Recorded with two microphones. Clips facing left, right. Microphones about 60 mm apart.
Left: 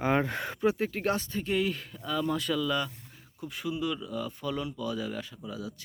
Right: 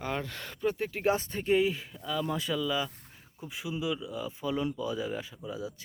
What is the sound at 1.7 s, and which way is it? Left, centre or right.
Speech, centre.